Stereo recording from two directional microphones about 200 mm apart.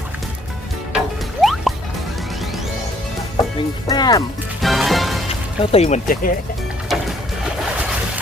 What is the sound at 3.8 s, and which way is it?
Speech, 20° left (ahead or behind).